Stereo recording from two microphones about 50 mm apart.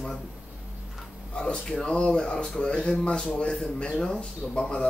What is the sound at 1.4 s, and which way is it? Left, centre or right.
Speech, centre.